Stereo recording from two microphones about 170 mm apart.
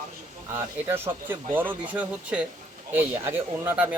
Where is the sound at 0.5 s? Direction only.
15° right (ahead or behind).